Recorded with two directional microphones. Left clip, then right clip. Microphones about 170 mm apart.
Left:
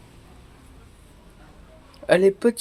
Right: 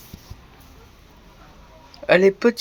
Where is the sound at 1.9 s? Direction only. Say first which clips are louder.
Right 2 dB; centre (ahead or behind).